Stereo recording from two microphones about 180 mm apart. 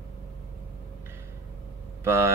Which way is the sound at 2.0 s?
15° right (ahead or behind).